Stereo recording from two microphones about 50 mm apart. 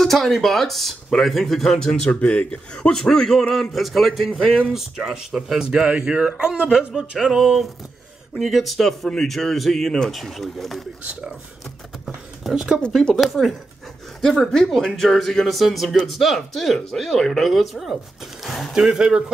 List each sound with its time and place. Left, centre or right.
0.0 s a man's voice: centre
3.7 s a man's voice: centre
12.5 s speech: centre
13.1 s a man's voice: centre
18.8 s speech: centre